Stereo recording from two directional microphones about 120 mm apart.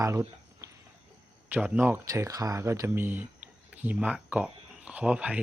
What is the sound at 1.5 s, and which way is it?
Speech, 15° right (ahead or behind).